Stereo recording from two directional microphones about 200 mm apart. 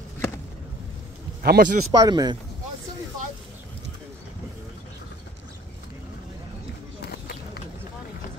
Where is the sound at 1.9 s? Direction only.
20° right (ahead or behind).